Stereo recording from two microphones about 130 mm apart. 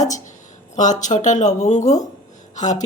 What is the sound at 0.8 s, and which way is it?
Speech, 70° left (ahead or behind).